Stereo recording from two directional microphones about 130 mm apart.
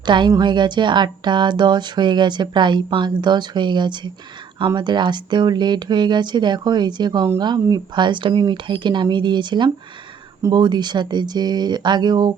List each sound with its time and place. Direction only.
0.0 s a woman's voice: 35° right (ahead or behind)